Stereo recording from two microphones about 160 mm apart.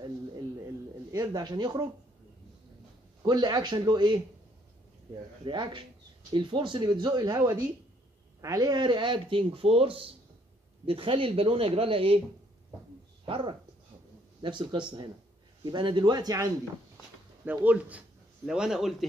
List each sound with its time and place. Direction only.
1.1 s speech: 25° right (ahead or behind)
3.2 s speech: 25° right (ahead or behind)
5.4 s speech: 30° right (ahead or behind)
13.3 s speech: 30° right (ahead or behind)
17.5 s a man's voice: 10° right (ahead or behind)